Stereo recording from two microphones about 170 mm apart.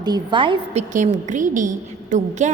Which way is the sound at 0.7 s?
45° right (ahead or behind).